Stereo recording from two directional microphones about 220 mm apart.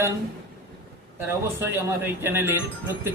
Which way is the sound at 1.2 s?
10° right (ahead or behind).